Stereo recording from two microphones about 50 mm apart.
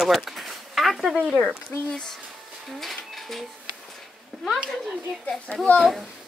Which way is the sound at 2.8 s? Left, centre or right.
Centre.